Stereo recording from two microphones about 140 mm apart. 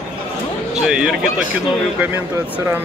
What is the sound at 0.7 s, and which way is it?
Speech, 5° right (ahead or behind).